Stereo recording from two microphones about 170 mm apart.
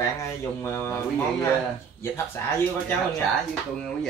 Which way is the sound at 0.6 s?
15° left (ahead or behind).